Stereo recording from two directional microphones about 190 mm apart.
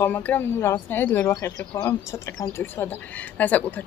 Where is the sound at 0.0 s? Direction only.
10° left (ahead or behind).